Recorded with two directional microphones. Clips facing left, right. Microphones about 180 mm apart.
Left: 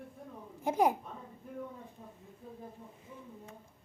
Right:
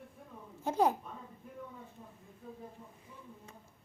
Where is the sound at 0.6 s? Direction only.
15° left (ahead or behind).